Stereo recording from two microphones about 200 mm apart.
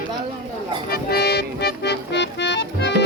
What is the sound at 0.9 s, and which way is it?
Music, 50° left (ahead or behind).